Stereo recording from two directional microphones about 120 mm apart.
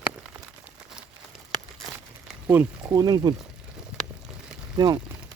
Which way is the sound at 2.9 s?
30° right (ahead or behind).